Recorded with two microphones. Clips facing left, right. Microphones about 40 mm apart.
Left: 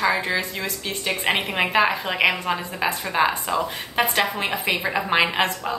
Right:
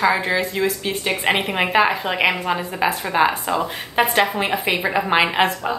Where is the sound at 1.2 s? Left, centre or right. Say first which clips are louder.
Right 2 dB; centre.